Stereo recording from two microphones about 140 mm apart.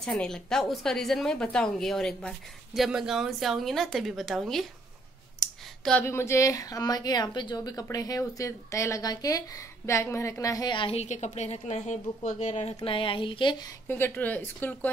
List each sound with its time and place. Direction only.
0.0 s a woman's voice: 5° left (ahead or behind)
5.4 s clicking: 5° left (ahead or behind)
6.0 s a woman's voice: 20° left (ahead or behind); by 11.0 s 35° left (ahead or behind)
11.0 s a woman's voice: 55° left (ahead or behind); by 13.7 s 35° left (ahead or behind)
13.8 s speech: 15° left (ahead or behind)